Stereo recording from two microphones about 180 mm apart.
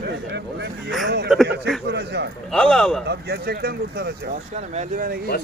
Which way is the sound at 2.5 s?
5° left (ahead or behind).